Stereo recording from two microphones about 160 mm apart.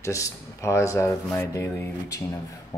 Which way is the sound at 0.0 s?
20° left (ahead or behind).